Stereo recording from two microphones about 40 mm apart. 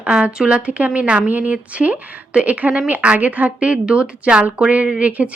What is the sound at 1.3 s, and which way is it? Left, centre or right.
Speech, right.